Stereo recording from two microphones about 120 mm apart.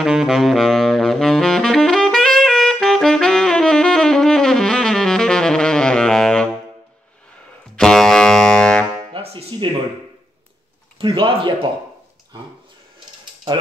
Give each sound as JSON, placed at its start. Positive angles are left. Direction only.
{"t": 0.0, "sound": "saxophone", "side_deg": -5}
{"t": 7.7, "sound": "music", "side_deg": 5}
{"t": 9.1, "sound": "music", "side_deg": -50}
{"t": 11.0, "sound": "a man's voice", "side_deg": -45}